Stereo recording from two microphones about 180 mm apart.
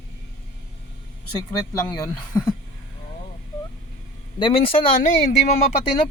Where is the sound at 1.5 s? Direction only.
20° left (ahead or behind).